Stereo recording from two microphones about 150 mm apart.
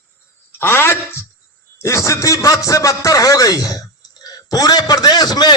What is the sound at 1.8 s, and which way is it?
A man's voice, 20° left (ahead or behind).